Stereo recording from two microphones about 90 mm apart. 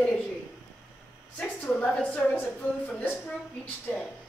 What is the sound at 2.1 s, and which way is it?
A woman's voice, 20° left (ahead or behind).